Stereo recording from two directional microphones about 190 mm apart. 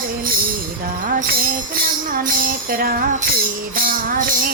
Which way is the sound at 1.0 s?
50° right (ahead or behind).